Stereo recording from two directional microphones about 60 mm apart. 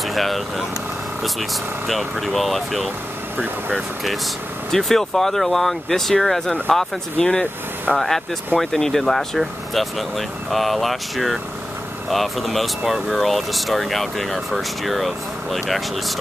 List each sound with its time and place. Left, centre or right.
0.0 s speech: centre
4.6 s speech: centre